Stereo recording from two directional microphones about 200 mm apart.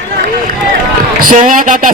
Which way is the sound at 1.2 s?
40° right (ahead or behind).